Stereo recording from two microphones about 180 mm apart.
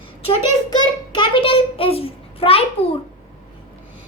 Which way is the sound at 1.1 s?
30° left (ahead or behind).